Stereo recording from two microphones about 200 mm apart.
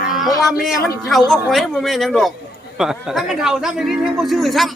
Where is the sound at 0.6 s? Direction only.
Centre (ahead or behind).